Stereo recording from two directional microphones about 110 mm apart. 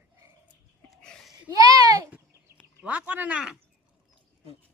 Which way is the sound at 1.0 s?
10° left (ahead or behind).